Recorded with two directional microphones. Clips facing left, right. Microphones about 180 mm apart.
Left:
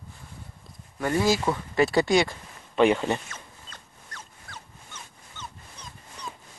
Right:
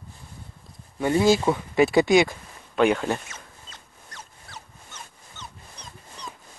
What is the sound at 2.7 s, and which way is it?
Speech, centre (ahead or behind).